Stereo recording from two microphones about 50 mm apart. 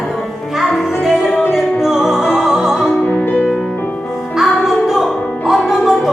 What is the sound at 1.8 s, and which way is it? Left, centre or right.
Music, centre.